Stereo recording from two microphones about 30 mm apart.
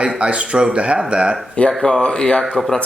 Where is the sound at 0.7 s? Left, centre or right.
Right.